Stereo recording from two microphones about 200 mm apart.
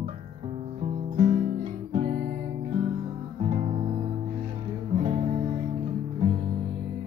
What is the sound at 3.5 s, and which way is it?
Music, 35° right (ahead or behind).